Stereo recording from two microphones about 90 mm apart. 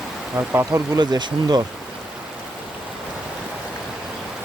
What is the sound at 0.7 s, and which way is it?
Speech, 45° right (ahead or behind).